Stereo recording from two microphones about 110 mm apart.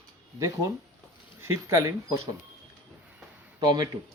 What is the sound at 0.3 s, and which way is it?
Speech, 30° right (ahead or behind).